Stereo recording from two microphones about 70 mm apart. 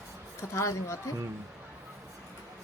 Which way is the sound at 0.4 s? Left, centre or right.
Left.